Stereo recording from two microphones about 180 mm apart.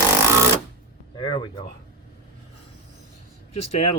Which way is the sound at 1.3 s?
25° left (ahead or behind).